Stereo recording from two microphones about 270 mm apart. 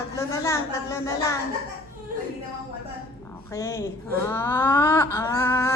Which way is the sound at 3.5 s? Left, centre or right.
Centre.